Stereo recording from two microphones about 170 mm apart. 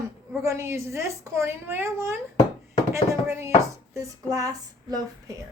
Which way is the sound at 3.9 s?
20° right (ahead or behind).